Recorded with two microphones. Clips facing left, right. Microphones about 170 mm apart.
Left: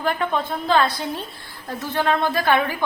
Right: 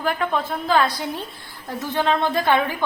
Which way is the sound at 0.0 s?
Centre (ahead or behind).